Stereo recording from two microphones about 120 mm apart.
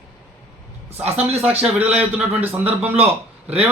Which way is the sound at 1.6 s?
10° right (ahead or behind).